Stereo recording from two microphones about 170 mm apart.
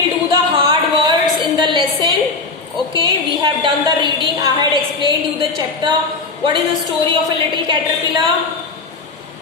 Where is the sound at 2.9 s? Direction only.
30° right (ahead or behind).